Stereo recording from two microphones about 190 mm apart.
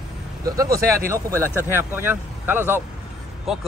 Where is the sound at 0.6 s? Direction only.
15° right (ahead or behind).